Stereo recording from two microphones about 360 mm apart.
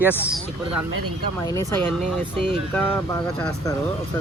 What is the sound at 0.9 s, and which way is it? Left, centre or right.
Speech, right.